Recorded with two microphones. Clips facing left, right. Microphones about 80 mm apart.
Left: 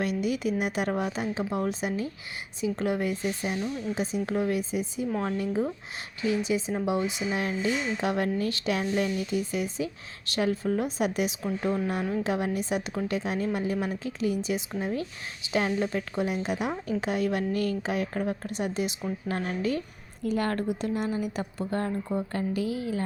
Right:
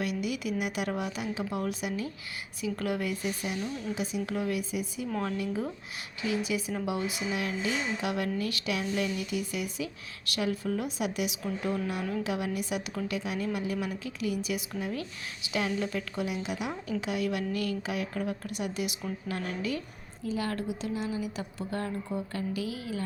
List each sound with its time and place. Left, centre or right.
0.0 s a woman's voice: left
20.2 s a woman's voice: left
21.6 s speech: left